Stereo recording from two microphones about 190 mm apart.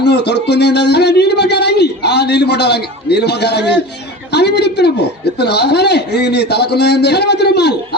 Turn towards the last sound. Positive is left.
turn(degrees=60)  # may be behind; listen again after turning